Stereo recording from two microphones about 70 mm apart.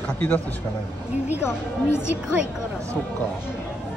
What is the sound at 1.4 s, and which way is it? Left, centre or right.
Speech, left.